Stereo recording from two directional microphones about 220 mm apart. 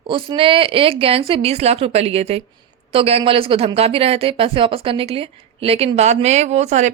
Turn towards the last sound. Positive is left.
turn(degrees=-30)  # may be behind; listen again after turning